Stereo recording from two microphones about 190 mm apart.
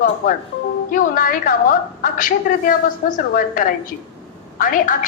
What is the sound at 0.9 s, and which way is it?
A woman's voice, 45° left (ahead or behind).